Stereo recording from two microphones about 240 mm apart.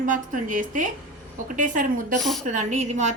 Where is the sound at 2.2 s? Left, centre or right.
Centre.